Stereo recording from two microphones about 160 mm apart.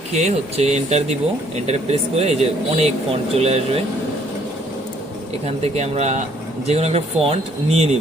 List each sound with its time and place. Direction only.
0.1 s speech: 45° right (ahead or behind)
5.5 s speech: 40° right (ahead or behind)